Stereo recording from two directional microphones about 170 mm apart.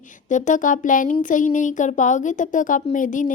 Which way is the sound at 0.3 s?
45° left (ahead or behind).